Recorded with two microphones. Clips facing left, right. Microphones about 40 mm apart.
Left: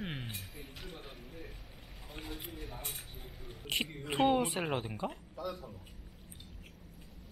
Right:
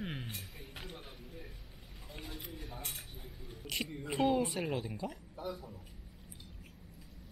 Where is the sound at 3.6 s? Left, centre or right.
Left.